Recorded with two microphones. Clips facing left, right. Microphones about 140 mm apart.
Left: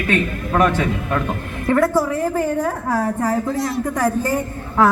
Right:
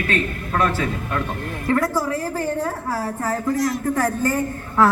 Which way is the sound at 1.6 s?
25° left (ahead or behind).